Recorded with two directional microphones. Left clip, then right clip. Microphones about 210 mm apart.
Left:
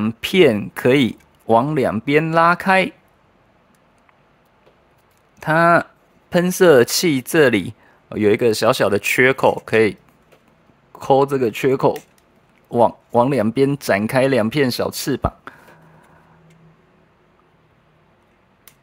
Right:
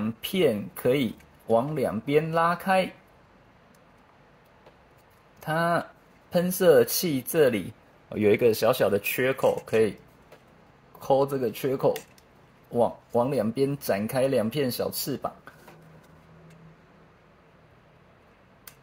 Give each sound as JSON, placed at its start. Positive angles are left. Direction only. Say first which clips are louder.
{"t": 0.0, "sound": "speech", "louder": "left 10 dB", "side_deg": 55}
{"t": 5.4, "sound": "speech", "louder": "left 12 dB", "side_deg": 55}
{"t": 8.1, "sound": "speech", "louder": "left 5 dB", "side_deg": 35}
{"t": 11.0, "sound": "speech", "louder": "left 8 dB", "side_deg": 55}